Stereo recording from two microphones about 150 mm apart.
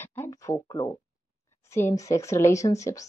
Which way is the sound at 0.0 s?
15° left (ahead or behind).